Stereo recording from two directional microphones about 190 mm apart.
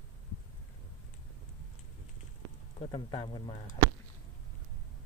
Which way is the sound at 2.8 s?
25° left (ahead or behind).